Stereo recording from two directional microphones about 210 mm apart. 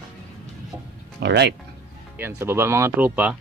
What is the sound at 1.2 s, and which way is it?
Speech, 55° right (ahead or behind).